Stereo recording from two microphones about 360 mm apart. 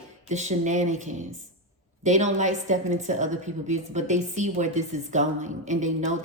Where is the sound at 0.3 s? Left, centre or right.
Centre.